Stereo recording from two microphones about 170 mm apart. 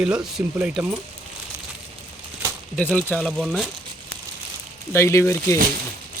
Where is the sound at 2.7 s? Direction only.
10° left (ahead or behind).